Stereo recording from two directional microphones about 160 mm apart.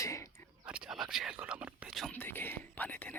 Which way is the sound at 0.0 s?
20° left (ahead or behind).